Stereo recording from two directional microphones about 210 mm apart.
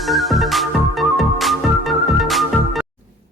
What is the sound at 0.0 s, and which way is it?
Music, centre (ahead or behind).